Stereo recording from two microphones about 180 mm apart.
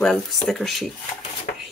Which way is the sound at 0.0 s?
5° left (ahead or behind).